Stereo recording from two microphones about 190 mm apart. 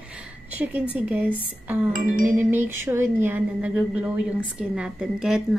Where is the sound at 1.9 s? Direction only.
45° right (ahead or behind).